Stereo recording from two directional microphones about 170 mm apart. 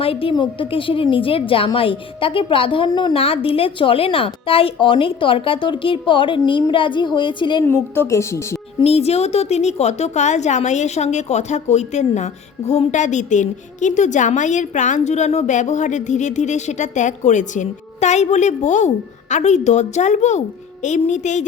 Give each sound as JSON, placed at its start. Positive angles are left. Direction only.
{"t": 0.0, "sound": "a woman's voice", "side_deg": 35}
{"t": 7.6, "sound": "a woman's voice", "side_deg": 15}
{"t": 8.8, "sound": "a woman's voice", "side_deg": 35}